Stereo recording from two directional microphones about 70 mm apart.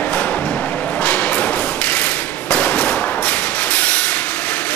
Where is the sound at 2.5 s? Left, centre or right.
Left.